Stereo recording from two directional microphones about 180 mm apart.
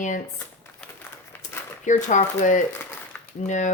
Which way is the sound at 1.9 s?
45° left (ahead or behind).